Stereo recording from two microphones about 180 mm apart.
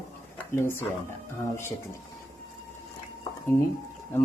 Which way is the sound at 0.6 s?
15° left (ahead or behind).